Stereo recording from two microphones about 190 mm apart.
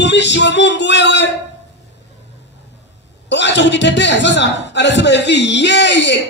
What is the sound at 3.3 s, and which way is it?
A man's voice, 65° left (ahead or behind).